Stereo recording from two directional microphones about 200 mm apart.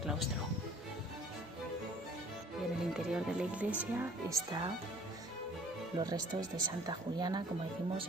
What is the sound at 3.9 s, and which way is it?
Speech, 15° right (ahead or behind).